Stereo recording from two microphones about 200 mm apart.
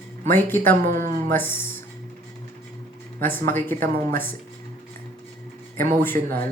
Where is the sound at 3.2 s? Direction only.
10° left (ahead or behind).